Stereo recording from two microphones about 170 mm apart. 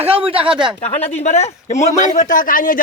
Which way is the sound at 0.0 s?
35° right (ahead or behind).